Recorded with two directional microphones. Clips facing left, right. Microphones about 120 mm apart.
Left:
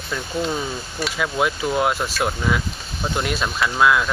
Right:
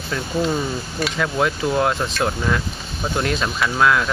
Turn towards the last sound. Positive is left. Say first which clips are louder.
# even
turn(degrees=5)  # may be behind; listen again after turning